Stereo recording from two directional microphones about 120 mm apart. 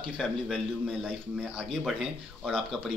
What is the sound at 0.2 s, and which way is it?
Speech, centre (ahead or behind).